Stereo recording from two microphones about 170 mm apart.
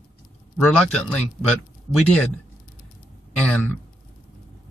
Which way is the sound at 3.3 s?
5° left (ahead or behind).